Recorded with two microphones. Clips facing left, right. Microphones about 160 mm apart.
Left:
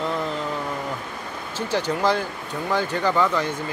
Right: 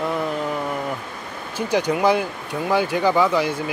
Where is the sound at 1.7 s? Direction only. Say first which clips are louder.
Right 4 dB; 15° right (ahead or behind).